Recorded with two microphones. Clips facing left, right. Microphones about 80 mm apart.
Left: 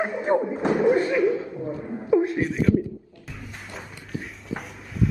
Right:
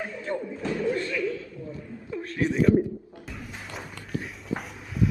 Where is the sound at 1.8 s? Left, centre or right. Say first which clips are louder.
Left 13 dB; left.